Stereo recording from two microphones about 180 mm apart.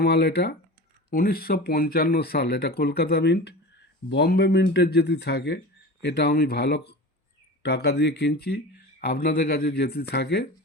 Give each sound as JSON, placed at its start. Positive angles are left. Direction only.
{"t": 0.0, "sound": "speech", "side_deg": 65}